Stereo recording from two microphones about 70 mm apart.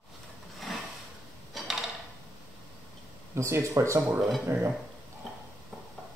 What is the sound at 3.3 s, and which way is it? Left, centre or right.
Speech, right.